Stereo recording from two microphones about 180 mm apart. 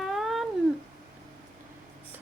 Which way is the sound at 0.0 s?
Centre (ahead or behind).